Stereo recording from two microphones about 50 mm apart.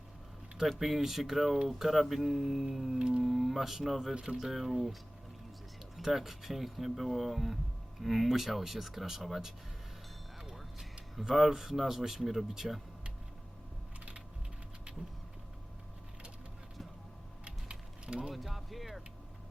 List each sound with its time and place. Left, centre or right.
0.7 s speech: centre
3.0 s speech: centre
4.1 s speech: centre
4.4 s speech: centre
6.0 s speech: centre
17.4 s a sound: centre
18.3 s speech: centre